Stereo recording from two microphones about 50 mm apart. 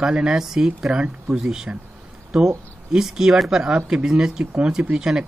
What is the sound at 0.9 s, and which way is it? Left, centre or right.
Speech, right.